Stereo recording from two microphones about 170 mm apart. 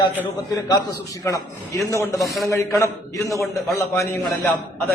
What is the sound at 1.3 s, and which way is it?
Speech, 20° left (ahead or behind).